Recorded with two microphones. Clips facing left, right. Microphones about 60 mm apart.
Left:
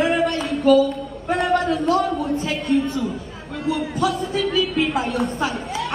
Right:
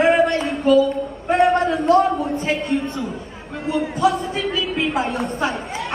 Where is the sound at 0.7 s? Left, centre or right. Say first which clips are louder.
Even; left.